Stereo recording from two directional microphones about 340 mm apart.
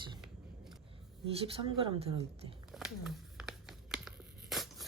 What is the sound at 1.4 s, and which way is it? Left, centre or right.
A woman's voice, centre.